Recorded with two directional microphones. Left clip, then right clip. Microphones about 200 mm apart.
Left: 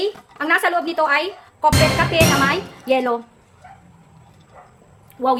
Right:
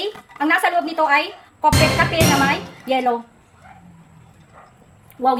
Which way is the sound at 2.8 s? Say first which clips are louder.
Left 1 dB; 25° left (ahead or behind).